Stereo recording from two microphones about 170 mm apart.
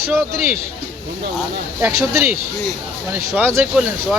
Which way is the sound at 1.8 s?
15° right (ahead or behind).